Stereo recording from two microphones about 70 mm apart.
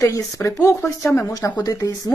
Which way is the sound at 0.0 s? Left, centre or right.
Left.